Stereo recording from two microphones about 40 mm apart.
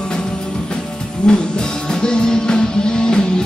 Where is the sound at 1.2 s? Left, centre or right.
Left.